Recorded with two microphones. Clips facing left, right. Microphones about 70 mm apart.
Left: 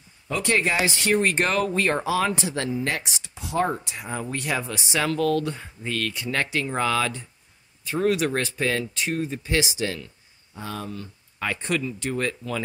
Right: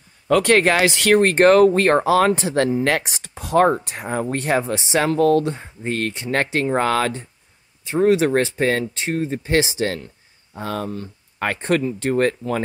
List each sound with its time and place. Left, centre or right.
0.3 s speech: right
7.8 s speech: right